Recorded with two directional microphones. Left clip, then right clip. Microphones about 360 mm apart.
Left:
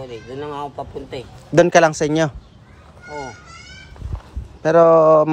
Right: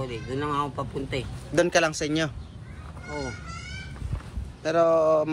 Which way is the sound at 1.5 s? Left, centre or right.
Centre.